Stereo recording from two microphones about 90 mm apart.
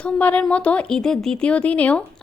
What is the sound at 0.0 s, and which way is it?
A woman's voice, 15° left (ahead or behind).